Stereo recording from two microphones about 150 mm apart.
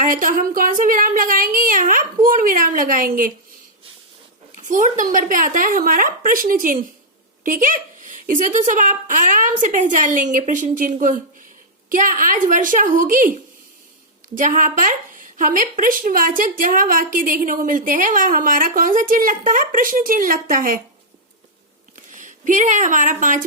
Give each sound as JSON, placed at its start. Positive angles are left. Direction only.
{"t": 0.0, "sound": "a woman's voice", "side_deg": -60}
{"t": 4.5, "sound": "a woman's voice", "side_deg": -55}
{"t": 21.9, "sound": "speech", "side_deg": -60}